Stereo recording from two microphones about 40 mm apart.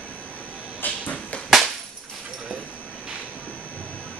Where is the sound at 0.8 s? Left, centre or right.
Left.